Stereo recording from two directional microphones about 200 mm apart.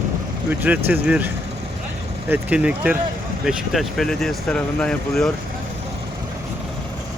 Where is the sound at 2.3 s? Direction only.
5° right (ahead or behind).